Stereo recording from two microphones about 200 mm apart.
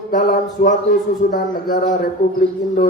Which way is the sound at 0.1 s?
45° left (ahead or behind).